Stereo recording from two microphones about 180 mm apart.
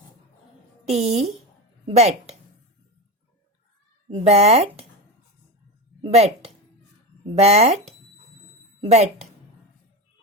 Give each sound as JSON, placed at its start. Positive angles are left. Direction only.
{"t": 0.9, "sound": "a woman's voice", "side_deg": -35}
{"t": 4.1, "sound": "speech", "side_deg": -35}
{"t": 6.0, "sound": "speech", "side_deg": -35}
{"t": 8.8, "sound": "a woman's voice", "side_deg": -35}